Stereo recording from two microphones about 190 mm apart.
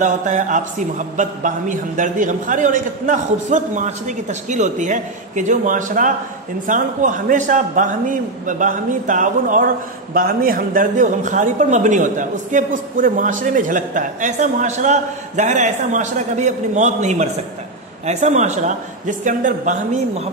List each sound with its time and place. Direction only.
0.0 s a man's voice: 40° right (ahead or behind)